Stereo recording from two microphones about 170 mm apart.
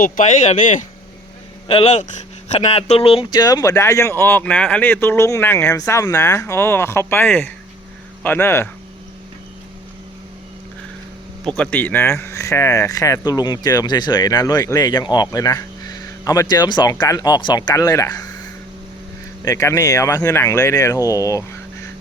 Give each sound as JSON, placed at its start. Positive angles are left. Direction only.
{"t": 0.0, "sound": "speech", "side_deg": 45}
{"t": 1.6, "sound": "speech", "side_deg": 35}
{"t": 11.4, "sound": "speech", "side_deg": 5}
{"t": 19.5, "sound": "speech", "side_deg": 15}